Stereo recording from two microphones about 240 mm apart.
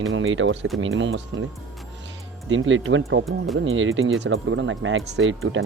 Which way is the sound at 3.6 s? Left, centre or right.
Right.